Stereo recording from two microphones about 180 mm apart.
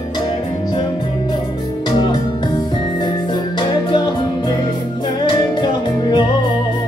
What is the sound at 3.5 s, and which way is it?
Music, 25° left (ahead or behind).